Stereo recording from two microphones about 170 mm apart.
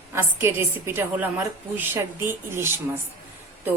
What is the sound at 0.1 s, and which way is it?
A woman's voice, 15° right (ahead or behind).